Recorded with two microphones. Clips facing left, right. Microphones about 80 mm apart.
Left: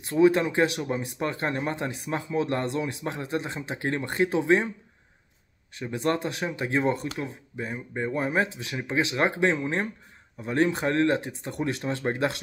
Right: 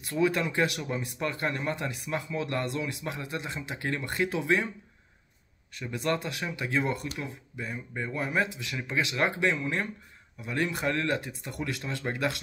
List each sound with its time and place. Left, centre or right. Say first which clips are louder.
0.0 s speech: left 6 dB; left
5.8 s speech: left 3 dB; left